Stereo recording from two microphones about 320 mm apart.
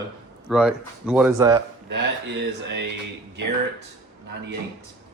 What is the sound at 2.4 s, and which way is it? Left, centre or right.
Speech, right.